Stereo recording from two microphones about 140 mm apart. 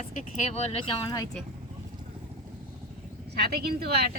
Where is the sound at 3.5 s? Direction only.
90° right.